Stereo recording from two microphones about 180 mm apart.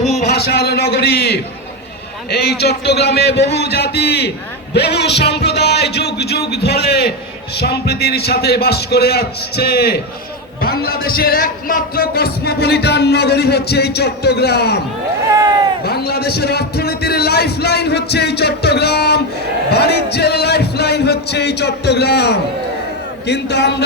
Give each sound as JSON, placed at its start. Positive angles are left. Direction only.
{"t": 0.3, "sound": "a man's voice", "side_deg": 65}
{"t": 15.8, "sound": "a man's voice", "side_deg": 60}